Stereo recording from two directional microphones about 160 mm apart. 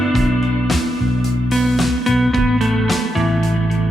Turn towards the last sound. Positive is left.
turn(degrees=0)  # may be behind; listen again after turning